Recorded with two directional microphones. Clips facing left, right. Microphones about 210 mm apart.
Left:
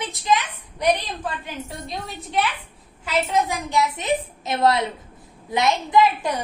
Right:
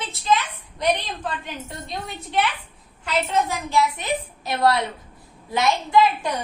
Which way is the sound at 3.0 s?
15° left (ahead or behind).